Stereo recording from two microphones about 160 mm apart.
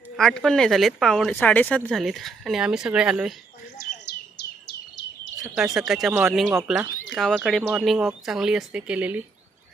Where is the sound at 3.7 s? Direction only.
85° left.